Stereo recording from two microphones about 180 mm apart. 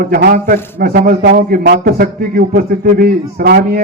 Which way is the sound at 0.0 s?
55° right (ahead or behind).